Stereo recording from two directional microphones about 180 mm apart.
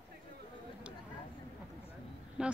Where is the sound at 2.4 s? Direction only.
5° right (ahead or behind).